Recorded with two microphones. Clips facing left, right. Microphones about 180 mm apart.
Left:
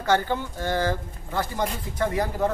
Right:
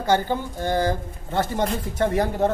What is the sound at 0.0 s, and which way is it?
Speech, 15° right (ahead or behind).